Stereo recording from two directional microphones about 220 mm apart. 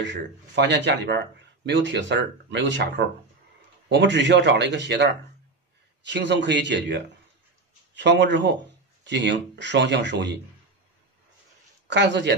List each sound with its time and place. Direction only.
0.0 s a man's voice: 55° right (ahead or behind)
3.9 s a man's voice: 55° right (ahead or behind)
11.9 s a man's voice: 55° right (ahead or behind)